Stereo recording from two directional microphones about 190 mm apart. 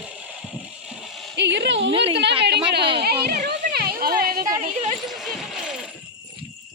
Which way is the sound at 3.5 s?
55° right (ahead or behind).